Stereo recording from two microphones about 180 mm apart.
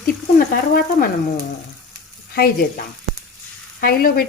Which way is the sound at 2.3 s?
55° left (ahead or behind).